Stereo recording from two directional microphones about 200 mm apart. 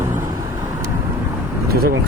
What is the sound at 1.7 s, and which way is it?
Speech, 50° right (ahead or behind).